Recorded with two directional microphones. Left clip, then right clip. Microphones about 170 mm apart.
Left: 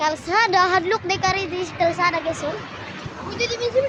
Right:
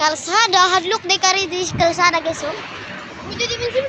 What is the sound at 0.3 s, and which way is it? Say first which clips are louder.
Speech: right 3 dB; 5° left (ahead or behind).